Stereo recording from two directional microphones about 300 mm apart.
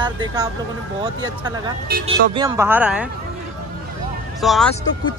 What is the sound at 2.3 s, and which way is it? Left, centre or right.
Speech, centre.